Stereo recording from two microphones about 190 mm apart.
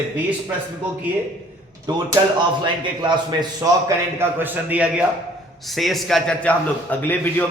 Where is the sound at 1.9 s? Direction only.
20° right (ahead or behind).